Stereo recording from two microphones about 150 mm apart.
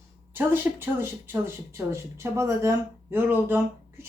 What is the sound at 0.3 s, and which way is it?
Speech, 15° right (ahead or behind).